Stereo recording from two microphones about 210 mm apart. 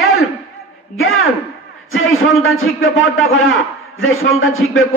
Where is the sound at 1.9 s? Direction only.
75° left (ahead or behind).